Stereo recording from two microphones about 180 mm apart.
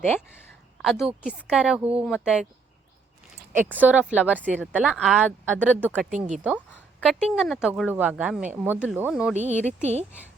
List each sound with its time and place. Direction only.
0.8 s a woman's voice: centre (ahead or behind)
3.8 s a woman's voice: 10° right (ahead or behind)
6.1 s speech: 45° right (ahead or behind)
7.0 s a woman's voice: centre (ahead or behind)
9.3 s speech: 40° right (ahead or behind)